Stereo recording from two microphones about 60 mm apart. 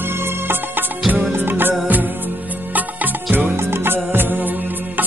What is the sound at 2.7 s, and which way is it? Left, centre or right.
Music, right.